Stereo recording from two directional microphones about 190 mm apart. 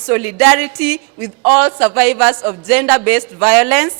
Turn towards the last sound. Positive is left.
turn(degrees=-5)  # may be behind; listen again after turning